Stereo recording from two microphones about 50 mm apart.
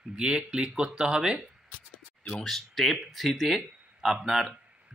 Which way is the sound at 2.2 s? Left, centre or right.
Left.